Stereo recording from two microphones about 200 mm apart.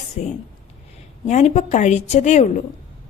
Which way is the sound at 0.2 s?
35° left (ahead or behind).